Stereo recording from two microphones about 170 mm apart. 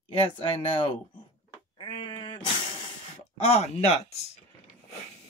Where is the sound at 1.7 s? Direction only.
30° left (ahead or behind).